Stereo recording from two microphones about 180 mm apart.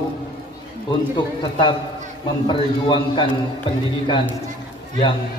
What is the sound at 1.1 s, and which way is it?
A man's voice, 25° left (ahead or behind).